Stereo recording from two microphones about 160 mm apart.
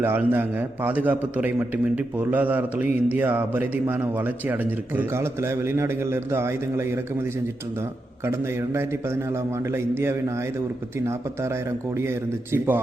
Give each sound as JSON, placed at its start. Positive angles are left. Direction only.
{"t": 0.0, "sound": "a man's voice", "side_deg": -10}